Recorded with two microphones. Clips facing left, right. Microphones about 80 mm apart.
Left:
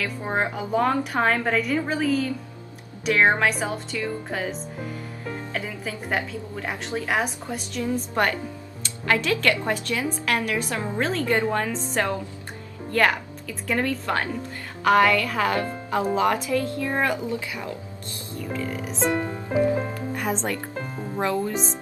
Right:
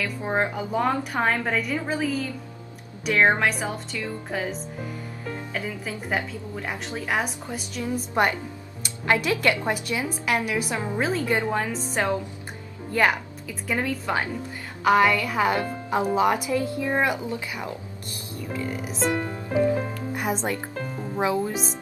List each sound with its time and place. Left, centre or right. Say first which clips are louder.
0.0 s a woman's voice: even; centre
8.1 s speech: right 1 dB; centre
18.5 s a woman's voice: even; centre
20.2 s speech: right 1 dB; centre
20.7 s music: even; centre
21.2 s speech: even; centre